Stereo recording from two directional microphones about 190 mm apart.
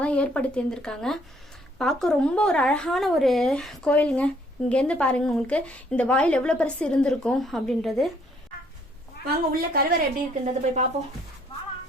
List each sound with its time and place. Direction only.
0.0 s a woman's voice: 5° left (ahead or behind)
9.5 s a woman's voice: 50° right (ahead or behind)
10.4 s speech: 35° right (ahead or behind)